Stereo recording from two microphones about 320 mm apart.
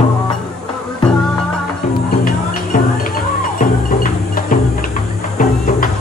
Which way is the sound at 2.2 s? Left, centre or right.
Left.